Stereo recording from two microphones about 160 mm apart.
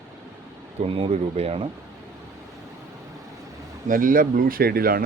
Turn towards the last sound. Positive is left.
turn(degrees=-65)  # may be behind; listen again after turning